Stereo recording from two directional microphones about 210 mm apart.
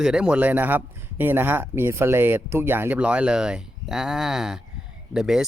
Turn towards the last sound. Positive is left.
turn(degrees=0)  # may be behind; listen again after turning